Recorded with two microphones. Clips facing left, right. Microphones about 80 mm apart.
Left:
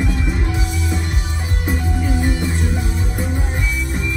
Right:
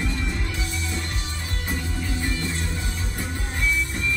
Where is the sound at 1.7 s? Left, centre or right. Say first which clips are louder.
Left 8 dB; left.